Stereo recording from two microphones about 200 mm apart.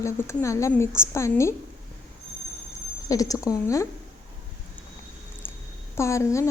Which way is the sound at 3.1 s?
15° left (ahead or behind).